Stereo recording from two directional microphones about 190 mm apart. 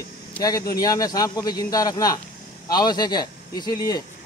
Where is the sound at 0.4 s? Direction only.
20° left (ahead or behind).